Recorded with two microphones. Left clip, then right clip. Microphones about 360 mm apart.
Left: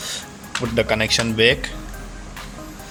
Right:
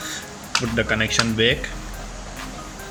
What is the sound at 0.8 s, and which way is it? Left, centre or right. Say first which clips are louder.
Speech: left 3 dB; centre.